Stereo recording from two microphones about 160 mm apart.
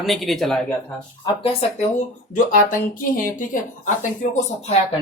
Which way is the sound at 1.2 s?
35° left (ahead or behind).